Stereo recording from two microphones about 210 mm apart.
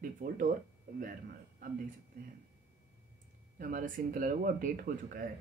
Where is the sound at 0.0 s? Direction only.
40° right (ahead or behind).